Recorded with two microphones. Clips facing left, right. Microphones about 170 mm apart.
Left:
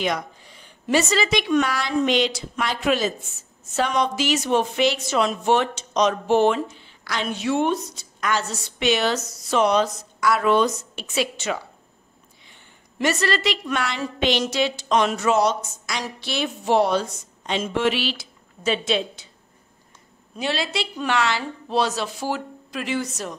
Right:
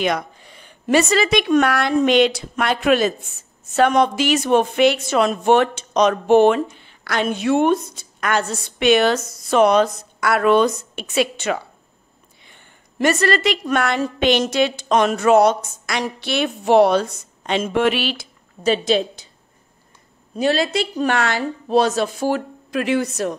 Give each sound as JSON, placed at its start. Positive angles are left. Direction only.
{"t": 0.0, "sound": "a woman's voice", "side_deg": -60}
{"t": 20.3, "sound": "a woman's voice", "side_deg": -45}